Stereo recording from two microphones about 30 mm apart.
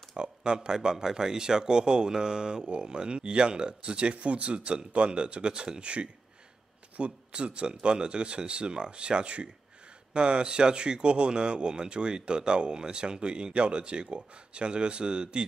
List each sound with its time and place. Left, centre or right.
0.1 s speech: right